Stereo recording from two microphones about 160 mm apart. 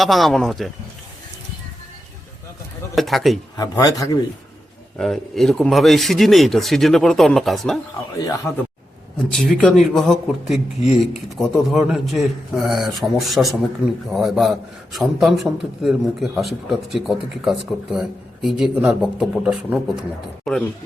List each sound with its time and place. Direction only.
0.0 s a man's voice: centre (ahead or behind)
2.9 s a man's voice: centre (ahead or behind)
3.6 s speech: 20° left (ahead or behind)
4.9 s a man's voice: centre (ahead or behind)
9.1 s a man's voice: centre (ahead or behind)